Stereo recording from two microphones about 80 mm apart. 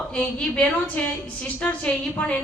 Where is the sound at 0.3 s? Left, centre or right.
Centre.